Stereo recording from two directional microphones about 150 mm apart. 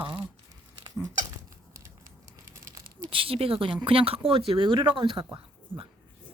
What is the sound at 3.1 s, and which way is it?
Speech, 35° right (ahead or behind).